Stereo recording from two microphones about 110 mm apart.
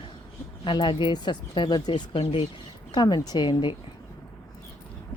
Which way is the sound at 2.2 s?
60° left (ahead or behind).